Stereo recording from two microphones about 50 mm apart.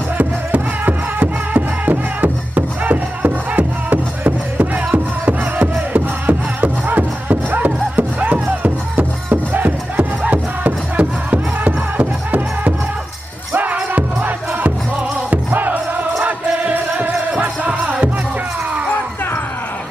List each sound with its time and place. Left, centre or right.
0.2 s music: right
13.9 s music: right